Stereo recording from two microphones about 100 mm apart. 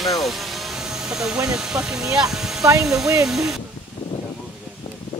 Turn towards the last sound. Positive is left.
turn(degrees=-5)  # may be behind; listen again after turning